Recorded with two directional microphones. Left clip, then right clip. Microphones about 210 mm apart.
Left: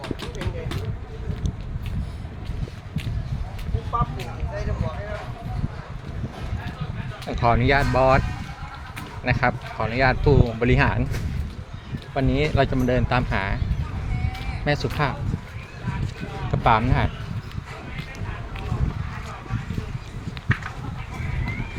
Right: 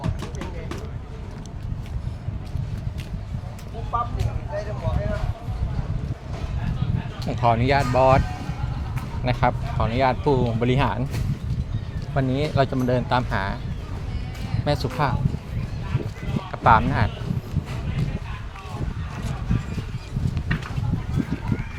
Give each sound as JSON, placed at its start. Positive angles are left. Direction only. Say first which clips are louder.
{"t": 3.9, "sound": "vehicle", "louder": "even", "side_deg": 50}
{"t": 7.3, "sound": "speech", "louder": "even", "side_deg": 5}
{"t": 9.2, "sound": "speech", "louder": "even", "side_deg": 0}
{"t": 12.1, "sound": "speech", "louder": "left 1 dB", "side_deg": 5}
{"t": 14.6, "sound": "speech", "louder": "even", "side_deg": 5}
{"t": 16.5, "sound": "speech", "louder": "right 2 dB", "side_deg": 5}